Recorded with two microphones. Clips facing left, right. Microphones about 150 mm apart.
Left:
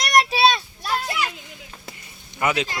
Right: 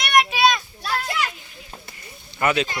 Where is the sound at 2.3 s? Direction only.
15° left (ahead or behind).